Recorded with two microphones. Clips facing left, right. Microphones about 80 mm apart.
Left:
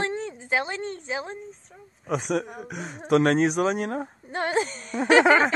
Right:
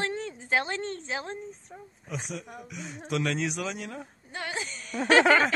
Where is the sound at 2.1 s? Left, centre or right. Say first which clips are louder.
Left 11 dB; left.